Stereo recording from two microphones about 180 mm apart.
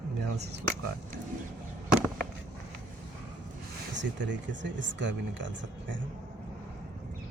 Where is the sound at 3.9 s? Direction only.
80° right.